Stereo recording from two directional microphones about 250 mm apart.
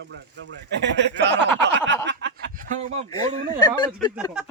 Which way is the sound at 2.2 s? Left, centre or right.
Right.